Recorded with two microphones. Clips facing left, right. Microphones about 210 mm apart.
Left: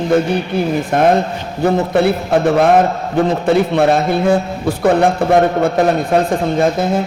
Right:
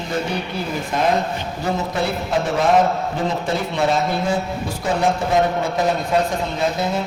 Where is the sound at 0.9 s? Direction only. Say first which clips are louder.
Left 5 dB; 55° left (ahead or behind).